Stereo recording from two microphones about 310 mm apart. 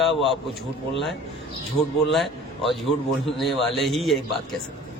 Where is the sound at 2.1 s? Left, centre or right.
Centre.